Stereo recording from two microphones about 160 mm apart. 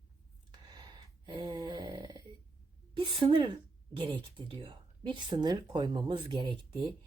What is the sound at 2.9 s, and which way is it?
A woman's voice, 30° right (ahead or behind).